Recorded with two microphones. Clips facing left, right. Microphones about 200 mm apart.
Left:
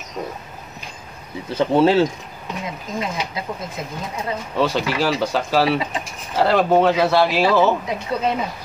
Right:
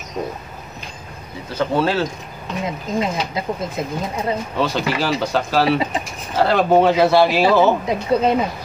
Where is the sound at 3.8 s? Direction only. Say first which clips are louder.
Right 6 dB; 25° right (ahead or behind).